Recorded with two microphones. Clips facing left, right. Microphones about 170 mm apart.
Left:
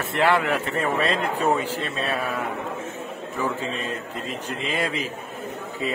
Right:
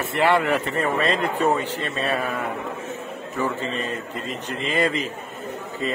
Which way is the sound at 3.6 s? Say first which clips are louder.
Right 2 dB; centre (ahead or behind).